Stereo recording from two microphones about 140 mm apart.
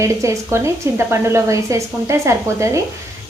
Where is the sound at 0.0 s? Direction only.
20° right (ahead or behind).